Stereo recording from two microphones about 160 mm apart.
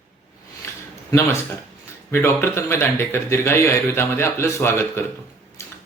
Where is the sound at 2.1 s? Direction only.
15° left (ahead or behind).